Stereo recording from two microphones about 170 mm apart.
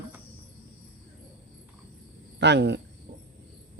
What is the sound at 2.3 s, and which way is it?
Speech, 90° right.